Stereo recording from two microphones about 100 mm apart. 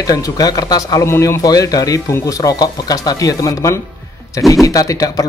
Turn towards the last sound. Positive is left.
turn(degrees=35)  # may be behind; listen again after turning